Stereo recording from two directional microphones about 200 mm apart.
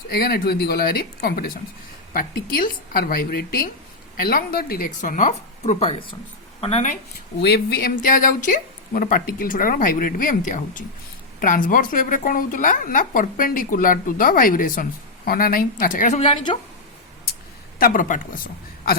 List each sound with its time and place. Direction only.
0.1 s a woman's voice: 50° left (ahead or behind); by 6.9 s 30° left (ahead or behind)
7.4 s a woman's voice: 50° left (ahead or behind); by 16.6 s 25° left (ahead or behind)
17.7 s a woman's voice: 45° left (ahead or behind)